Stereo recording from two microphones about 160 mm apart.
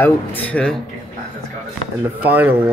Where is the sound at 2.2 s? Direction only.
10° right (ahead or behind).